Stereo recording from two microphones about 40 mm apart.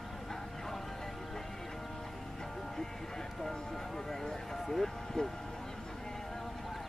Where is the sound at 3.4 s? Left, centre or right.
Centre.